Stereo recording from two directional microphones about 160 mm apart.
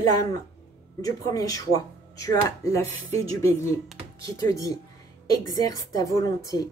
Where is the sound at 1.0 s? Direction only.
20° left (ahead or behind).